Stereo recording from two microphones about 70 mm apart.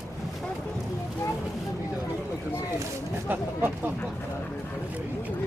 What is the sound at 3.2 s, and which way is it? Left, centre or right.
Speech, right.